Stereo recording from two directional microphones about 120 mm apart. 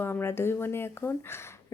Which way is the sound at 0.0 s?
20° left (ahead or behind).